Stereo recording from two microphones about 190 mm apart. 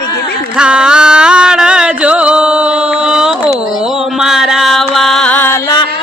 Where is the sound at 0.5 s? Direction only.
5° right (ahead or behind).